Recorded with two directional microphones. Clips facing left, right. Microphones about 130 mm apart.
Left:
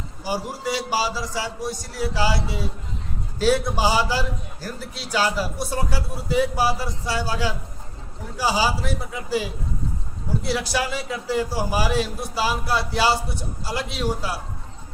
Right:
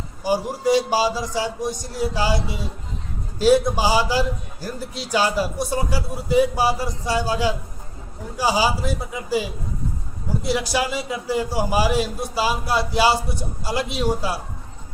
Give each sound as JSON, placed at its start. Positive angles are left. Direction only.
{"t": 0.3, "sound": "a man's voice", "side_deg": -15}